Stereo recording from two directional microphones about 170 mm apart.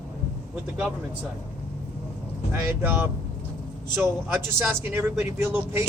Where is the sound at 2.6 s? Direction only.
15° right (ahead or behind).